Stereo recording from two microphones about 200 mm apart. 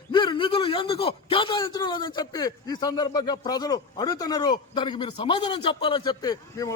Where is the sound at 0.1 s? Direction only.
25° left (ahead or behind).